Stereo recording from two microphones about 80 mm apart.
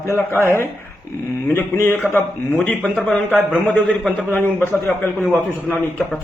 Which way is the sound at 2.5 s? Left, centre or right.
Centre.